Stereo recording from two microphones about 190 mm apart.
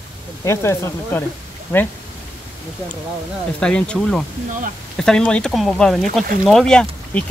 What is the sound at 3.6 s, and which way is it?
Speech, 5° left (ahead or behind).